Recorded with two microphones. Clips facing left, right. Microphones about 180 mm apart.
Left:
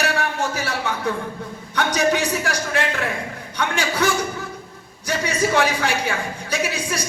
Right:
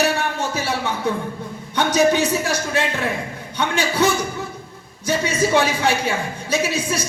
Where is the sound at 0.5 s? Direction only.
25° right (ahead or behind).